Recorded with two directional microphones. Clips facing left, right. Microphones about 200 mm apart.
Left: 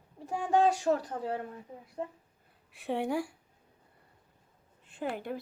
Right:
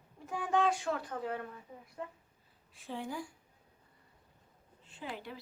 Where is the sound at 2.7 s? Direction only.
70° left (ahead or behind).